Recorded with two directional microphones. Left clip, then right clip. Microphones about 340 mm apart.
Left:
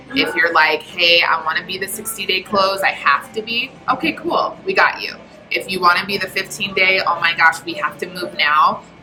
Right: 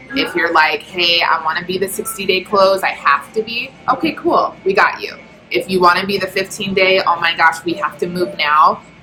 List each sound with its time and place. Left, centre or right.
0.1 s a woman's voice: centre